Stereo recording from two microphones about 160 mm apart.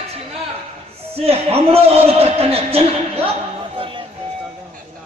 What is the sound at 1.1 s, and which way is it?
A man's voice, 40° right (ahead or behind).